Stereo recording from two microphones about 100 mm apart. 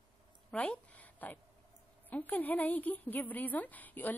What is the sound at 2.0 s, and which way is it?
A woman's voice, 15° left (ahead or behind).